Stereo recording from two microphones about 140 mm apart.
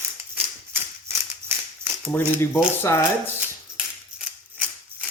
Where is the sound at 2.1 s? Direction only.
15° left (ahead or behind).